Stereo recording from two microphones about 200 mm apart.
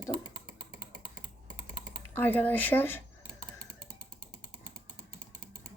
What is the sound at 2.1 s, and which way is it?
Speech, 10° left (ahead or behind).